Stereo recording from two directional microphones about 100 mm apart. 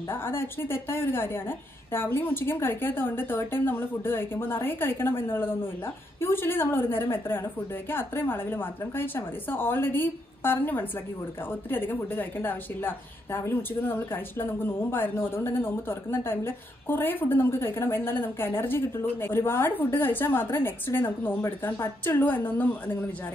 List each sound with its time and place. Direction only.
0.1 s a woman's voice: 25° left (ahead or behind)